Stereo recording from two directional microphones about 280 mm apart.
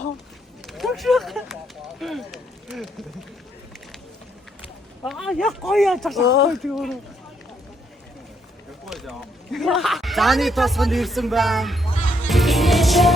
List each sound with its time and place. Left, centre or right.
0.7 s speech: centre
2.0 s a sound: centre
5.0 s speech: centre
6.2 s speech: left
6.6 s speech: centre
8.9 s speech: centre
12.3 s music: centre